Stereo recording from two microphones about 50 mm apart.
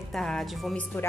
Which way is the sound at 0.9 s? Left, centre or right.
Left.